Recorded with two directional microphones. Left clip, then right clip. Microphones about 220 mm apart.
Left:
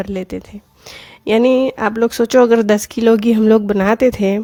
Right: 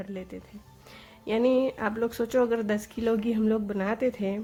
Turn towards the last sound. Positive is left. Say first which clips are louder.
# left 14 dB
turn(degrees=50)  # may be behind; listen again after turning